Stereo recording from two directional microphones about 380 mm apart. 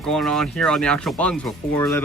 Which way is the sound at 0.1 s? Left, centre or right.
Centre.